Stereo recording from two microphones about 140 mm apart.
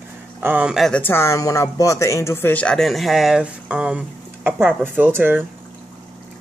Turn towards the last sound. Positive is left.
turn(degrees=-15)  # may be behind; listen again after turning